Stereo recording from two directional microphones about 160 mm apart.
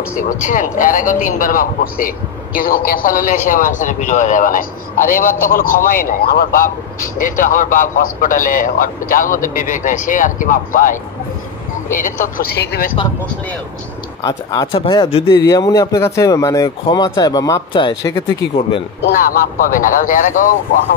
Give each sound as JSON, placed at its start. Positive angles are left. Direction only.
{"t": 0.2, "sound": "a man's voice", "side_deg": 55}
{"t": 14.2, "sound": "speech", "side_deg": 25}
{"t": 19.6, "sound": "a man's voice", "side_deg": 60}